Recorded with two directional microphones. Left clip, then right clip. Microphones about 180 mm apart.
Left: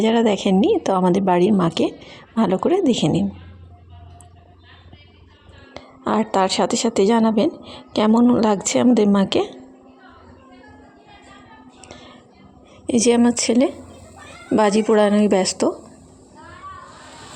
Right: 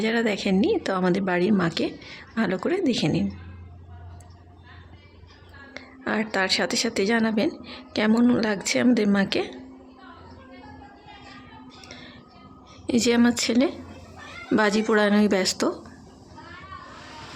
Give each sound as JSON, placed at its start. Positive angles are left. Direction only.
{"t": 0.0, "sound": "a woman's voice", "side_deg": 30}
{"t": 5.7, "sound": "a woman's voice", "side_deg": 30}
{"t": 11.8, "sound": "music", "side_deg": 30}
{"t": 12.9, "sound": "a woman's voice", "side_deg": 25}